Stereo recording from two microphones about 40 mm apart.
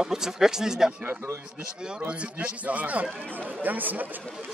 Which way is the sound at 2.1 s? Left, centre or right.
Right.